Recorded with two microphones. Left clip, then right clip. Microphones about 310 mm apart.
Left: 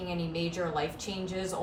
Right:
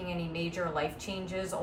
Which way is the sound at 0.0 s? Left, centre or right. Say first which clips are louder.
Left 2 dB; centre.